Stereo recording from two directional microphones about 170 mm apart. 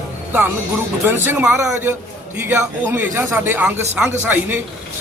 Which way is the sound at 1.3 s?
15° right (ahead or behind).